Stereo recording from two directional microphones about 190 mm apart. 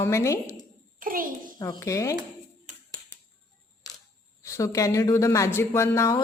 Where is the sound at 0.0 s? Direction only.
15° left (ahead or behind).